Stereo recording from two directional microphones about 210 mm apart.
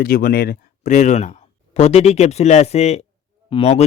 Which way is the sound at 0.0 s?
45° left (ahead or behind).